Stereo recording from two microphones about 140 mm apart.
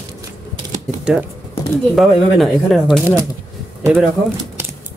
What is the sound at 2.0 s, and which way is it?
Speech, centre (ahead or behind).